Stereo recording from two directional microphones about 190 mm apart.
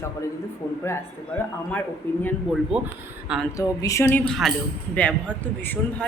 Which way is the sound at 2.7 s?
5° right (ahead or behind).